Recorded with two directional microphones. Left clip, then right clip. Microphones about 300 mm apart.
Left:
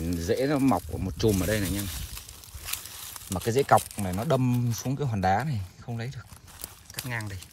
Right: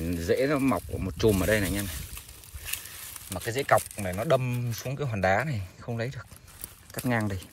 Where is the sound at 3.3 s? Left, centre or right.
Centre.